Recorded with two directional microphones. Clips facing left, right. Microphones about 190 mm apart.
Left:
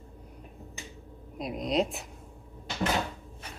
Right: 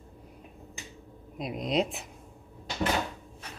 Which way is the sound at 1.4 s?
Centre (ahead or behind).